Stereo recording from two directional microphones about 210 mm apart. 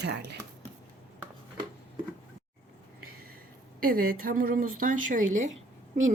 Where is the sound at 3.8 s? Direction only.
45° right (ahead or behind).